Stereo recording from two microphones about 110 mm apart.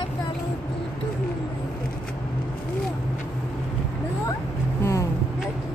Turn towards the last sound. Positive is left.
turn(degrees=25)  # may be behind; listen again after turning